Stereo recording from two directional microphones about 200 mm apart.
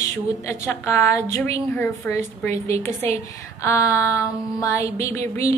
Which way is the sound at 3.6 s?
15° left (ahead or behind).